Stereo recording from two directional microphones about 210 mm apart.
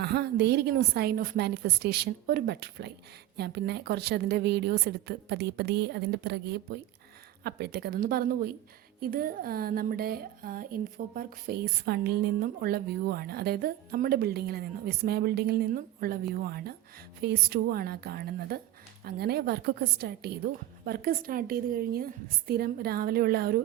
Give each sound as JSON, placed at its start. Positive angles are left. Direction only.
{"t": 0.0, "sound": "a woman's voice", "side_deg": -50}